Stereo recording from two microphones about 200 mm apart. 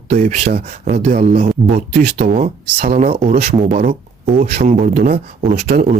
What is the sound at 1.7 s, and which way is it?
Speech, 50° right (ahead or behind).